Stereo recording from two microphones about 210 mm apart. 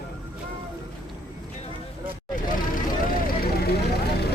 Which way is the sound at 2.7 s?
45° left (ahead or behind).